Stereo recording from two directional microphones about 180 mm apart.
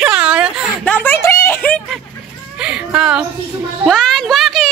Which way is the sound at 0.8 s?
10° left (ahead or behind).